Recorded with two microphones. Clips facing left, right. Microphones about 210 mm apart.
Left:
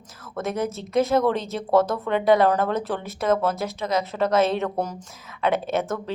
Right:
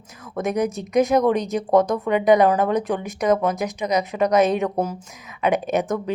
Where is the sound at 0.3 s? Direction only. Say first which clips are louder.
Right 4 dB; 15° right (ahead or behind).